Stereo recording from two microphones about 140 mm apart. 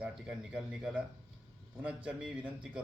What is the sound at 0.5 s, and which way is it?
Speech, 5° right (ahead or behind).